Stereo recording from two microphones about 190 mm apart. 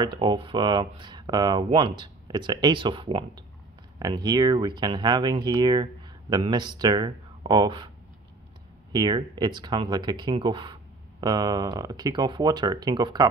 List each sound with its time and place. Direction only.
0.0 s speech: 25° right (ahead or behind)
8.9 s speech: 25° right (ahead or behind)